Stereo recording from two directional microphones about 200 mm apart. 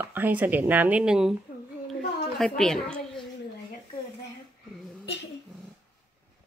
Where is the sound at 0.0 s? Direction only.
10° right (ahead or behind).